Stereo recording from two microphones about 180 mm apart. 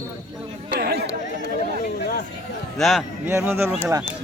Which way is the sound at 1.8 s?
50° left (ahead or behind).